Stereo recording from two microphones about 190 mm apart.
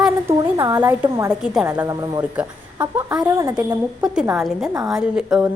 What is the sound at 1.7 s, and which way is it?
Speech, 15° right (ahead or behind).